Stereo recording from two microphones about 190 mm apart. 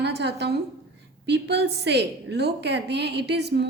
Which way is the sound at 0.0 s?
60° right (ahead or behind).